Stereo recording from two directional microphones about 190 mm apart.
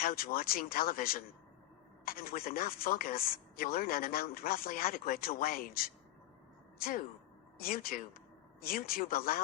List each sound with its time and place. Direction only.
0.0 s a woman's voice: 50° left (ahead or behind)